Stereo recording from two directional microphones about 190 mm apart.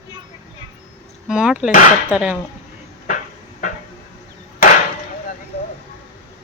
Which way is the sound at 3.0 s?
45° left (ahead or behind).